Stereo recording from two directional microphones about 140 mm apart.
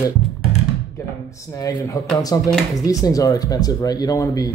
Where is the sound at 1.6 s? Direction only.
25° left (ahead or behind).